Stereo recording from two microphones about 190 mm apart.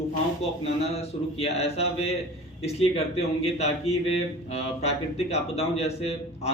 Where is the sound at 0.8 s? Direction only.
35° left (ahead or behind).